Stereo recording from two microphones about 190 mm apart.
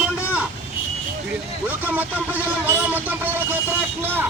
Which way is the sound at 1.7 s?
10° right (ahead or behind).